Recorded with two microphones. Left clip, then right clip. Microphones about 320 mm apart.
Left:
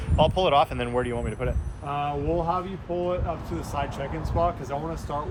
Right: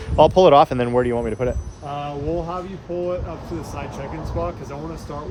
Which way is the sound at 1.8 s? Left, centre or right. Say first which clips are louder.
Right 1 dB; centre.